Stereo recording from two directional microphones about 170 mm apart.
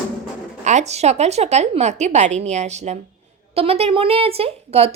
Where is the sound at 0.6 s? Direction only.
45° right (ahead or behind).